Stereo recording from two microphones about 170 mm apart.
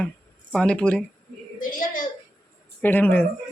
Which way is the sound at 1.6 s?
50° left (ahead or behind).